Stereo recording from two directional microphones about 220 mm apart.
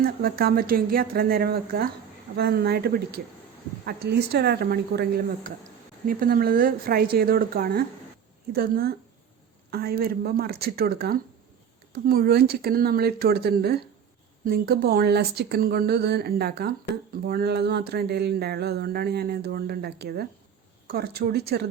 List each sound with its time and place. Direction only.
0.0 s speech: 40° right (ahead or behind)